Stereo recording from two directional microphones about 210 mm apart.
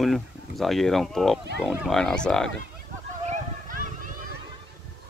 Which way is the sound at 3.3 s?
40° right (ahead or behind).